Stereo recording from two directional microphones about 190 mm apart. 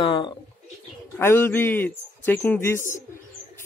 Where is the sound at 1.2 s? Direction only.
10° left (ahead or behind).